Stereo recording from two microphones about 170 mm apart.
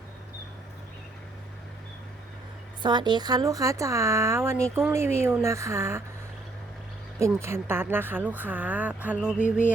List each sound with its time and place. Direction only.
2.8 s speech: 25° right (ahead or behind)
7.2 s speech: 15° right (ahead or behind)
9.4 s music: 50° left (ahead or behind)